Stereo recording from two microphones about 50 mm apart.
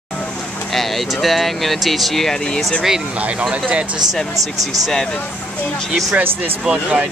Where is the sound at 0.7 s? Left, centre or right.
Centre.